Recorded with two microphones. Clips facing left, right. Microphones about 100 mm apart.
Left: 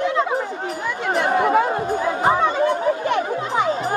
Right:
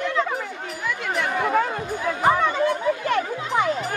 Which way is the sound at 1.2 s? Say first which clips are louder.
Left 5 dB; 25° left (ahead or behind).